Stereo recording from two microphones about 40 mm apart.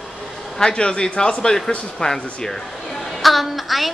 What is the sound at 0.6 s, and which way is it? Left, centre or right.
A man's voice, left.